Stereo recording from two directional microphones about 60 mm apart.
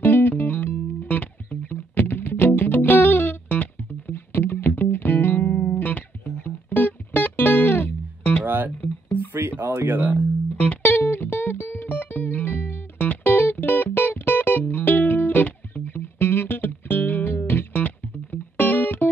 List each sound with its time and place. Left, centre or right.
0.0 s music: left
8.5 s music: right
9.3 s a sound: right
9.8 s music: right
10.7 s music: left